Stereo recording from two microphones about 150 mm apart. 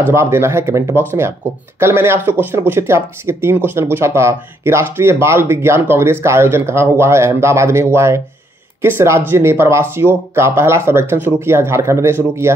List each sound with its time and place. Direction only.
0.1 s speech: 15° right (ahead or behind)